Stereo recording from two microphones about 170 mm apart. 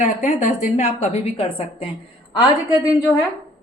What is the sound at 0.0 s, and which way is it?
A woman's voice, 45° left (ahead or behind).